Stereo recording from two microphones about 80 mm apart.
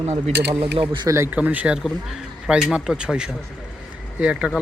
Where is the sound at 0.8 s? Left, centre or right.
Right.